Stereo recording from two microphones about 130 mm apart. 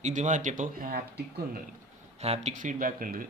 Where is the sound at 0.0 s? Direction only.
70° right (ahead or behind); by 1.0 s 90° right.